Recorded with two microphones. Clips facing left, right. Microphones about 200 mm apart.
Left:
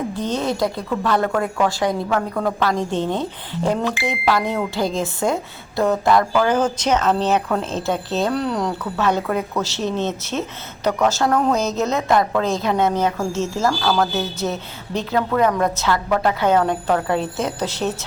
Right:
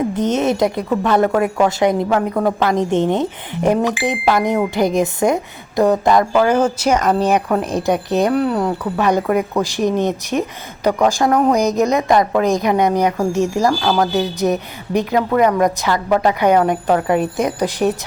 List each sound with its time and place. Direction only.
0.1 s a woman's voice: 20° right (ahead or behind)
6.4 s a woman's voice: 10° right (ahead or behind)